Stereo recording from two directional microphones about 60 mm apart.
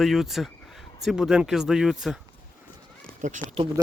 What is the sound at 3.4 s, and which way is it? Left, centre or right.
Speech, left.